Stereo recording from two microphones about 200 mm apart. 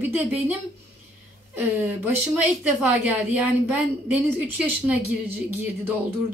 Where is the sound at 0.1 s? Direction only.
10° right (ahead or behind).